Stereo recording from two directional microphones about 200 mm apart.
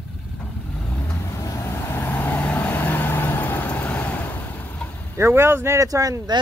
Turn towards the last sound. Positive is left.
turn(degrees=-15)  # may be behind; listen again after turning